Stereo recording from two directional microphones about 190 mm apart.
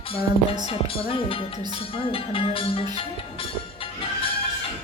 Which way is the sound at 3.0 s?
30° left (ahead or behind).